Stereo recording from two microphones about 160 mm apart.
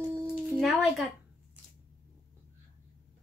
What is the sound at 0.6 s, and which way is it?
Speech, centre (ahead or behind).